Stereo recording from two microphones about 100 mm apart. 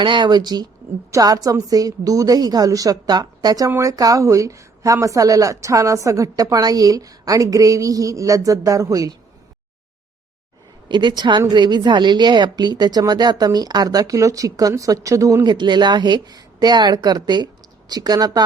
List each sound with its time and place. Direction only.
0.0 s a woman's voice: 50° right (ahead or behind); by 9.1 s 35° right (ahead or behind)
10.8 s a woman's voice: 50° right (ahead or behind); by 15.4 s 30° right (ahead or behind)
15.4 s a woman's voice: 50° right (ahead or behind)